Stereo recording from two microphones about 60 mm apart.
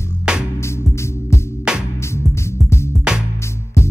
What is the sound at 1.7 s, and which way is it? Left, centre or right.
Music, centre.